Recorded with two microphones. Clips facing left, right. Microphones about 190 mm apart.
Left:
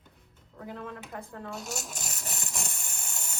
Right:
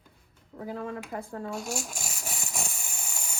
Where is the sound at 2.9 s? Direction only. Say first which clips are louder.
Right 2 dB; 10° right (ahead or behind).